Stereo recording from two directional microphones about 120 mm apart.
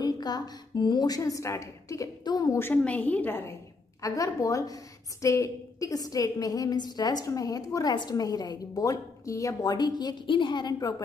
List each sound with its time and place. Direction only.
0.0 s a woman's voice: 35° left (ahead or behind)
2.6 s a woman's voice: 10° left (ahead or behind); by 11.0 s 35° left (ahead or behind)